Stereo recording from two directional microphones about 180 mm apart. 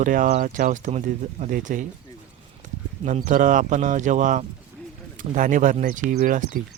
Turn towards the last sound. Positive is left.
turn(degrees=-50)  # may be behind; listen again after turning